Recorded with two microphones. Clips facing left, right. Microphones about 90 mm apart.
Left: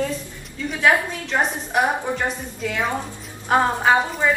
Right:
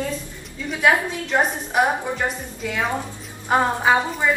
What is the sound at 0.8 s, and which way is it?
A woman's voice, 10° right (ahead or behind).